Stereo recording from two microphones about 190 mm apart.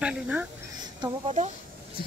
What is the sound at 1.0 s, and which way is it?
Speech, 35° right (ahead or behind).